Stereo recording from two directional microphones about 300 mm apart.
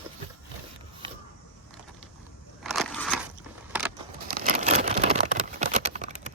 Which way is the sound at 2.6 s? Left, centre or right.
Centre.